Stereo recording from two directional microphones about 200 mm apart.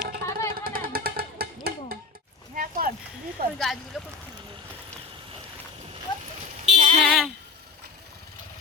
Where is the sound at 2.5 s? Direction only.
45° right (ahead or behind).